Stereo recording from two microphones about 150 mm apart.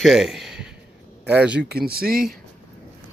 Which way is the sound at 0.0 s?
Centre (ahead or behind).